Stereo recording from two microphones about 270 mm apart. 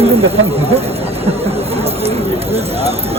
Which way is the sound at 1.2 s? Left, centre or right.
Right.